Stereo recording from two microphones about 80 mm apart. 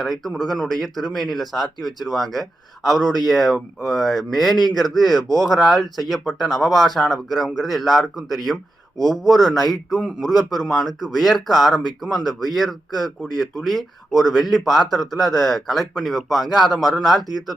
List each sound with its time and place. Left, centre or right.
0.0 s speech: centre